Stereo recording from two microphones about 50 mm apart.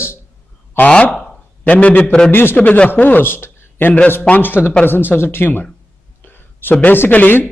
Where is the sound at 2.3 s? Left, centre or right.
Left.